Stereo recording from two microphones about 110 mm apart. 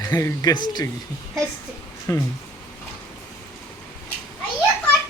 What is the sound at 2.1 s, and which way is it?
Speech, 30° left (ahead or behind).